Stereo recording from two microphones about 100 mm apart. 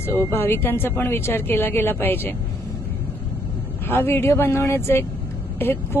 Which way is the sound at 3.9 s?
25° left (ahead or behind).